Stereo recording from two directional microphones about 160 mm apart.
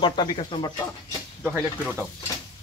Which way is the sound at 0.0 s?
30° left (ahead or behind).